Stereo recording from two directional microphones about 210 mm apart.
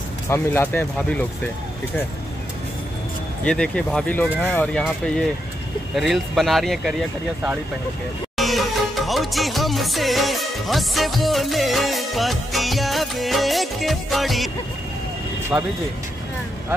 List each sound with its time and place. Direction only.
0.3 s speech: 10° left (ahead or behind)
3.4 s speech: 5° left (ahead or behind)
8.4 s music: centre (ahead or behind)
15.5 s speech: 5° right (ahead or behind)